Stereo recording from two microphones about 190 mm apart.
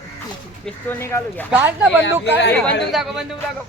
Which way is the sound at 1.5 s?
10° right (ahead or behind).